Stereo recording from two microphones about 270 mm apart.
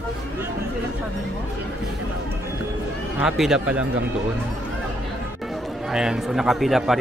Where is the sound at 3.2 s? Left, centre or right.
Centre.